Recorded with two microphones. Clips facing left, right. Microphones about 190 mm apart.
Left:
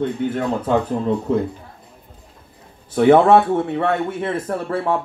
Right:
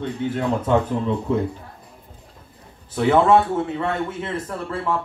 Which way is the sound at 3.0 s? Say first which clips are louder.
Left 4 dB; 60° left (ahead or behind).